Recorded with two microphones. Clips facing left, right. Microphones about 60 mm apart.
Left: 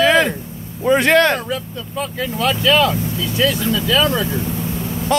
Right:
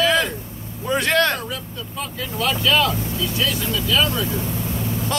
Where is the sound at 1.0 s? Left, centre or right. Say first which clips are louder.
Left 4 dB; left.